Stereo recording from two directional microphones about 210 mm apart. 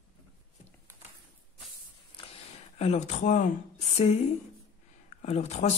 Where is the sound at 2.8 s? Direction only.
30° left (ahead or behind).